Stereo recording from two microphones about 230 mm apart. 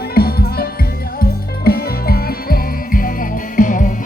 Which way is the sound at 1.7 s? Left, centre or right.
Left.